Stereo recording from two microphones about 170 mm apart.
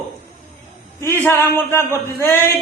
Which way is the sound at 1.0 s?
15° left (ahead or behind).